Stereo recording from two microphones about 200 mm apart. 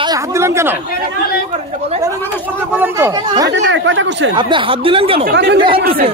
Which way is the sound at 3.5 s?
65° right (ahead or behind).